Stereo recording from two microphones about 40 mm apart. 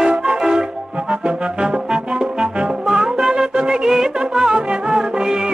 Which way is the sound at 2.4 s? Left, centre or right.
Centre.